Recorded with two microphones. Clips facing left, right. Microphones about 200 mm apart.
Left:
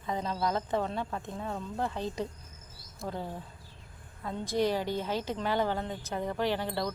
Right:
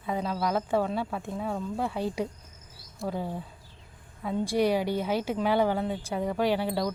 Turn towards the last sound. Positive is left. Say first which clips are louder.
# right 4 dB
turn(degrees=-10)  # may be behind; listen again after turning